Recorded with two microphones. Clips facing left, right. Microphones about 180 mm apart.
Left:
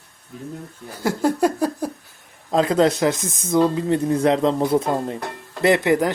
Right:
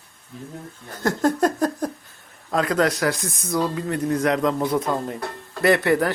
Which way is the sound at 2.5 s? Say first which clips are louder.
Left 4 dB; 25° left (ahead or behind).